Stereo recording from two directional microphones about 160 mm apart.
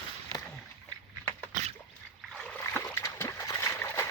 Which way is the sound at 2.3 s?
5° left (ahead or behind).